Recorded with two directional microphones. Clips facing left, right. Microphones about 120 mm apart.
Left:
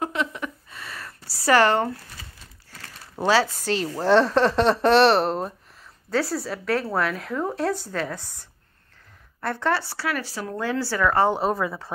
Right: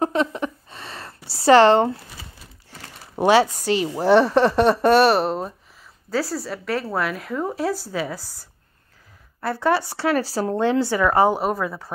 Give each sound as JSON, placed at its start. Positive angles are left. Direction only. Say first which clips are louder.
{"t": 0.0, "sound": "a sound", "louder": "right 6 dB", "side_deg": -35}
{"t": 3.6, "sound": "a woman's voice", "louder": "right 3 dB", "side_deg": -10}
{"t": 10.0, "sound": "a woman's voice", "louder": "right 8 dB", "side_deg": -30}